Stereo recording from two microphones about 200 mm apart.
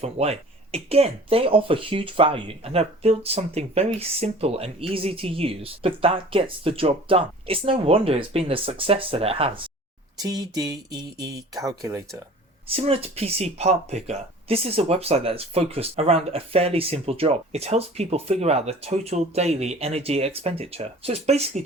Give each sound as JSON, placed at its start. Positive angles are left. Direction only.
{"t": 0.0, "sound": "speech", "side_deg": -30}
{"t": 12.6, "sound": "speech", "side_deg": -30}